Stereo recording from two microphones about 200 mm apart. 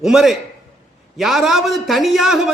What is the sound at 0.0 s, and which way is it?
A man's voice, centre (ahead or behind).